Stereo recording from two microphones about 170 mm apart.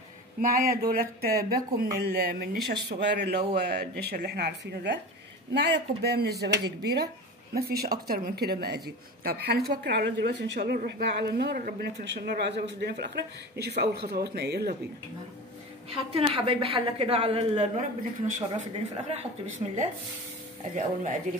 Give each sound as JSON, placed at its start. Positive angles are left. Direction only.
{"t": 0.4, "sound": "speech", "side_deg": -60}
{"t": 7.5, "sound": "speech", "side_deg": -65}
{"t": 9.8, "sound": "speech", "side_deg": -75}
{"t": 15.9, "sound": "a woman's voice", "side_deg": -35}
{"t": 20.7, "sound": "speech", "side_deg": -45}